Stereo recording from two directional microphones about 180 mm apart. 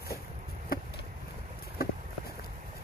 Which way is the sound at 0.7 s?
55° left (ahead or behind).